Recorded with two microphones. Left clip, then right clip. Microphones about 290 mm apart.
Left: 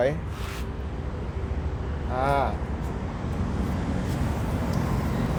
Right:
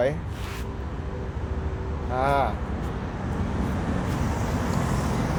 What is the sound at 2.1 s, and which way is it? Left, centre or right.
Speech, centre.